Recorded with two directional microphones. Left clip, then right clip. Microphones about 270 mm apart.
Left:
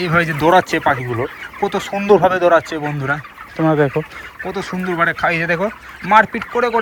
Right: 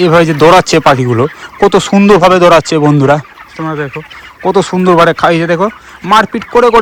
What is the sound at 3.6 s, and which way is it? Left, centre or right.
Speech, centre.